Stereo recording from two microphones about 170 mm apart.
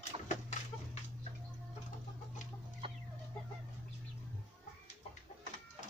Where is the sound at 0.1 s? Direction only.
35° right (ahead or behind).